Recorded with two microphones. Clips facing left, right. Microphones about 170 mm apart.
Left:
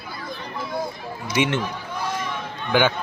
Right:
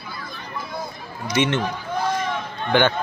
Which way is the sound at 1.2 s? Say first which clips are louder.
Right 1 dB; 10° left (ahead or behind).